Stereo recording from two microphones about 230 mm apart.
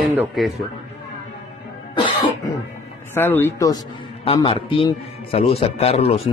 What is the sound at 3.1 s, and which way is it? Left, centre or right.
A man's voice, centre.